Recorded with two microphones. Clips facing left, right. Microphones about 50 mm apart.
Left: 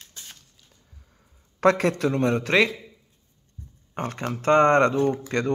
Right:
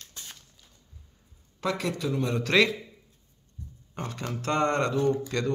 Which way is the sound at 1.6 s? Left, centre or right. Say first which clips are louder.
Left 9 dB; left.